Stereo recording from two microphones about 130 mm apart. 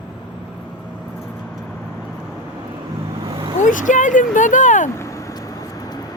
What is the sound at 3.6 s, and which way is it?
Speech, 80° left.